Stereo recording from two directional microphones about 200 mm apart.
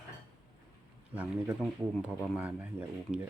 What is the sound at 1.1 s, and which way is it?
Speech, 5° right (ahead or behind).